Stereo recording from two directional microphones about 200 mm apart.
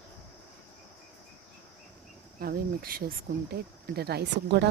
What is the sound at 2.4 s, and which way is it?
Speech, 50° right (ahead or behind).